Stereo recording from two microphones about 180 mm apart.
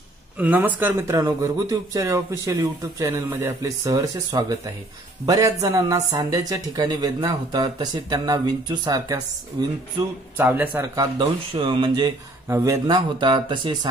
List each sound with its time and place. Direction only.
0.4 s speech: 10° right (ahead or behind)
10.3 s speech: 10° right (ahead or behind)
11.0 s speech: 25° right (ahead or behind)
12.4 s speech: 15° right (ahead or behind)